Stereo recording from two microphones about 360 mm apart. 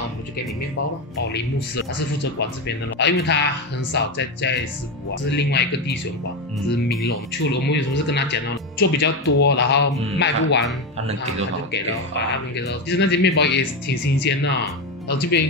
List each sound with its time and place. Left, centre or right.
2.3 s speech: left
7.7 s speech: left
11.7 s speech: left